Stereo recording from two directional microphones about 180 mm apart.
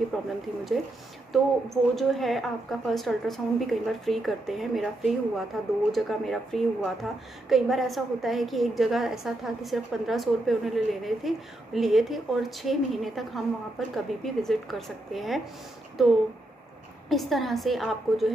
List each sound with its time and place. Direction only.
0.1 s a woman's voice: centre (ahead or behind)
17.1 s a woman's voice: centre (ahead or behind)